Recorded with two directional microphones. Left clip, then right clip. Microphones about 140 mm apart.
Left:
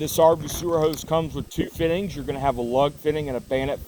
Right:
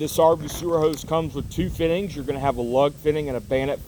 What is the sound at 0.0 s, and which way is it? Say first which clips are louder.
A man's voice: even; 45° left (ahead or behind).